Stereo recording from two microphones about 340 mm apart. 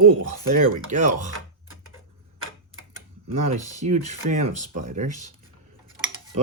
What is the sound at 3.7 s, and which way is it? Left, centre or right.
Speech, centre.